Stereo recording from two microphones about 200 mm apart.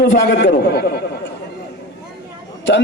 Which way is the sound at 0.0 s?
65° left (ahead or behind).